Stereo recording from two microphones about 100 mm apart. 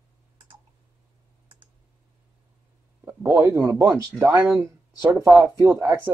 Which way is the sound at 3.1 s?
20° right (ahead or behind).